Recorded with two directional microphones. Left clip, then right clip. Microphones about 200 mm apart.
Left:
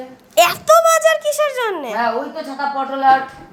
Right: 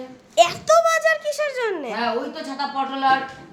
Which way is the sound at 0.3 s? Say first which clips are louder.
Left 4 dB; 5° left (ahead or behind).